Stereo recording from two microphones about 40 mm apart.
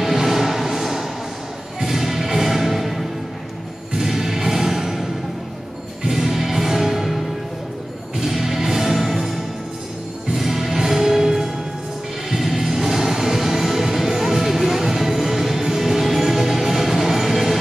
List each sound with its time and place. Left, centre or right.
0.0 s music: centre
6.0 s music: centre
8.2 s music: centre